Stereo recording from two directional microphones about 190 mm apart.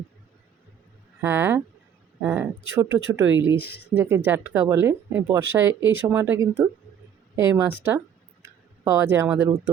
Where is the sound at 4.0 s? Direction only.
10° right (ahead or behind).